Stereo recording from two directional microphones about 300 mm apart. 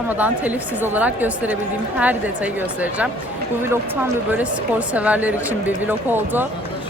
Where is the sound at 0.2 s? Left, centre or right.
Centre.